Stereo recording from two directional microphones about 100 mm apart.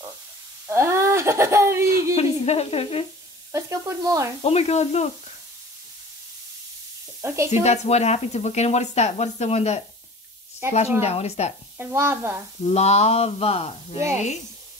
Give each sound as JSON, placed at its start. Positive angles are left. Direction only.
{"t": 0.7, "sound": "speech", "side_deg": -30}
{"t": 2.1, "sound": "speech", "side_deg": 90}
{"t": 3.5, "sound": "speech", "side_deg": -30}
{"t": 4.4, "sound": "speech", "side_deg": 85}
{"t": 7.2, "sound": "sizzle", "side_deg": -25}
{"t": 7.6, "sound": "speech", "side_deg": 90}
{"t": 10.6, "sound": "sizzle", "side_deg": -25}
{"t": 11.0, "sound": "speech", "side_deg": 90}
{"t": 11.8, "sound": "sizzle", "side_deg": -25}
{"t": 12.6, "sound": "speech", "side_deg": 90}